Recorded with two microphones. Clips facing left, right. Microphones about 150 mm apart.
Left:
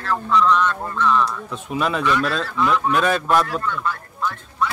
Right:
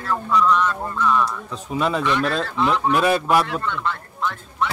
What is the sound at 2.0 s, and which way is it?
Speech, 20° right (ahead or behind).